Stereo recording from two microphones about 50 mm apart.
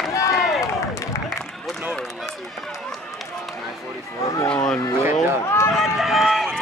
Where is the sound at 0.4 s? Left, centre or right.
Centre.